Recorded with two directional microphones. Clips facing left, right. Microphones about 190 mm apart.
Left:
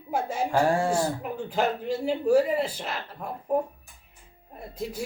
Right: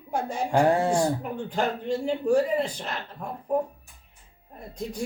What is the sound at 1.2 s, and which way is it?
Speech, 5° left (ahead or behind).